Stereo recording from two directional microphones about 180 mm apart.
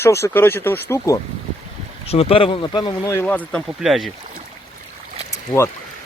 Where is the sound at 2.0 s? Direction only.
35° left (ahead or behind).